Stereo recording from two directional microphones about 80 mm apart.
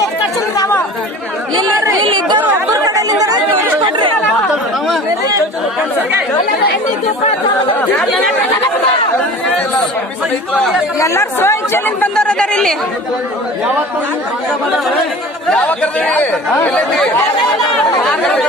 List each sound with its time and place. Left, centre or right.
1.6 s speech: right
2.0 s chatter: right
2.7 s chatter: right
11.0 s speech: left
12.2 s speech: centre
15.5 s speech: centre
16.7 s speech: centre